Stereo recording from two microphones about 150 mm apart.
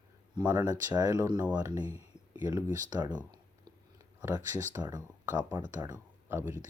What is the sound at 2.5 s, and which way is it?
Speech, 25° right (ahead or behind).